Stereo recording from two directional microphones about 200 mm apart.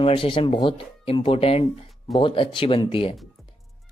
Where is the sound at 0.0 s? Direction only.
25° left (ahead or behind).